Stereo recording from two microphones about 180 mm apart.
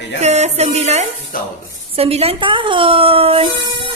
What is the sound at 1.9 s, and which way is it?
Speech, 30° right (ahead or behind).